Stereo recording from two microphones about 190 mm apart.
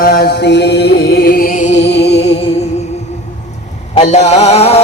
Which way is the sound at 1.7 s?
65° left (ahead or behind).